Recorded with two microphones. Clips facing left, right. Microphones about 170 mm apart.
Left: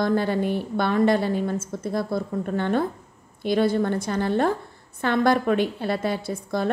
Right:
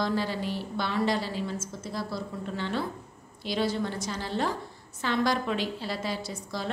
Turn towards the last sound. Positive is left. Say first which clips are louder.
# left 8 dB
turn(degrees=55)  # may be behind; listen again after turning